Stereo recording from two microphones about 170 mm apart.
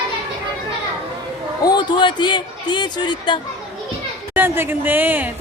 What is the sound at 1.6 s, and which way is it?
Speech, 25° left (ahead or behind).